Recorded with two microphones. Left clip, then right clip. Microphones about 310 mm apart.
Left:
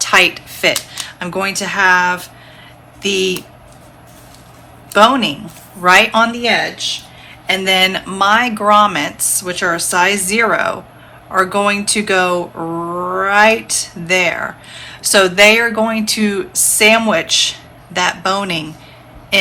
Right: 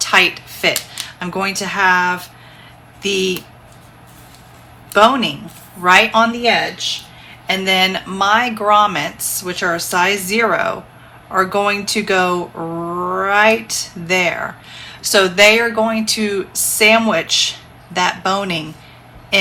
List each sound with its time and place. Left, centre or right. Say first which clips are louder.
0.0 s speech: left 2 dB; left
4.9 s speech: left 1 dB; left